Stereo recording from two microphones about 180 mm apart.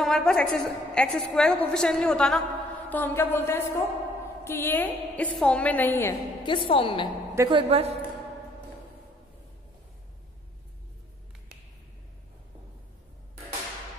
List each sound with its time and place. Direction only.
0.0 s a woman's voice: 5° left (ahead or behind)
6.4 s a woman's voice: 30° left (ahead or behind)
7.3 s a woman's voice: 25° right (ahead or behind)